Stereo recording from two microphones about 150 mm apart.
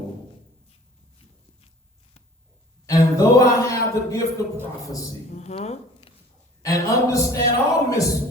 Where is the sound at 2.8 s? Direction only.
20° left (ahead or behind).